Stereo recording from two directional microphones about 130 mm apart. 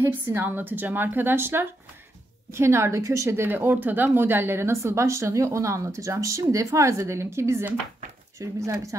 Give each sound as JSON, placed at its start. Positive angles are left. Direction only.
{"t": 0.0, "sound": "a woman's voice", "side_deg": -15}